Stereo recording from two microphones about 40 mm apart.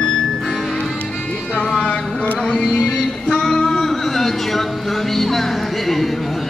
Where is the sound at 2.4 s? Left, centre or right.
Centre.